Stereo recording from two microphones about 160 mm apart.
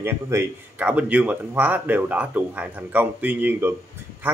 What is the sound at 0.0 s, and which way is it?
A man's voice, 15° right (ahead or behind).